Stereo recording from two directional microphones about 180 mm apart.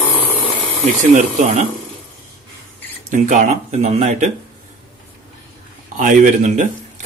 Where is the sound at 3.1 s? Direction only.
40° right (ahead or behind).